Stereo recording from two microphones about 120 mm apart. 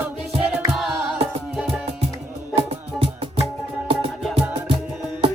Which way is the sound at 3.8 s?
45° right (ahead or behind).